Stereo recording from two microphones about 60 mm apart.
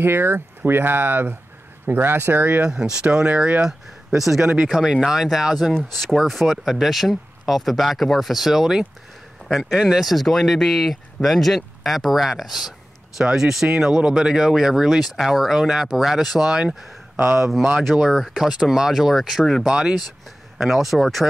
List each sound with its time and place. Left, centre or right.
0.0 s speech: right
2.6 s speech: centre
19.4 s speech: centre
19.7 s speech: centre
20.5 s speech: centre